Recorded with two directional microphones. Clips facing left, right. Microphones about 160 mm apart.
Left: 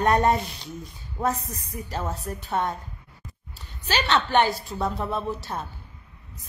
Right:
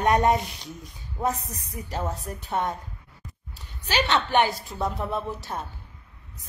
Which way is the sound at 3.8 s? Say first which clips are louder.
Even; 10° right (ahead or behind).